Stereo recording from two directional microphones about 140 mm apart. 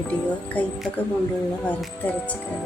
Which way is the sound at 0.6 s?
10° left (ahead or behind).